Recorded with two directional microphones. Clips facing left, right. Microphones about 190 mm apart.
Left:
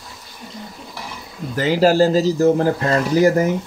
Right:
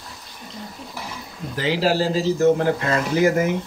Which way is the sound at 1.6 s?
45° left (ahead or behind).